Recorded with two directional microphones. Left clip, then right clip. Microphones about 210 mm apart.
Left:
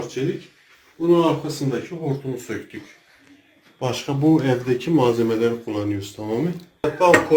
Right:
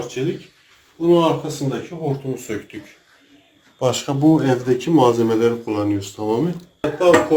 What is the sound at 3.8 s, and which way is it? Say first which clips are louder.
Speech: right 5 dB; 30° right (ahead or behind).